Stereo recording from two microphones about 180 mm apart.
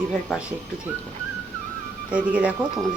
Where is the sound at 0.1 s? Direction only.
Centre (ahead or behind).